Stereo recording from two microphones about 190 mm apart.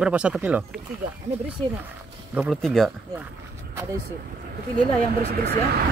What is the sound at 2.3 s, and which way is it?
Speech, 5° right (ahead or behind).